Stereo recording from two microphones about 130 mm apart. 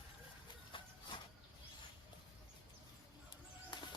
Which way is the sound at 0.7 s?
40° left (ahead or behind).